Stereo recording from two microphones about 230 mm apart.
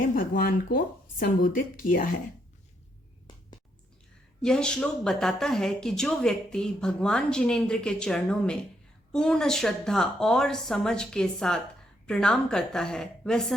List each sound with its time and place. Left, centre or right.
0.0 s speech: left
4.4 s speech: centre